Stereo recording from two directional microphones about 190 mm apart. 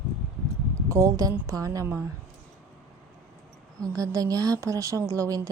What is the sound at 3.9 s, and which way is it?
A woman's voice, 20° right (ahead or behind).